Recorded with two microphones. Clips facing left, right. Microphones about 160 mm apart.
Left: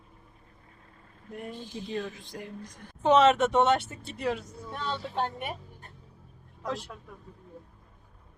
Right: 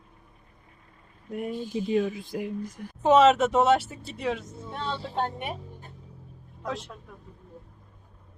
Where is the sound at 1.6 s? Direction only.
45° right (ahead or behind).